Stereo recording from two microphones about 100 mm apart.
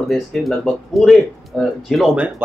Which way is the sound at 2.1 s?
15° right (ahead or behind).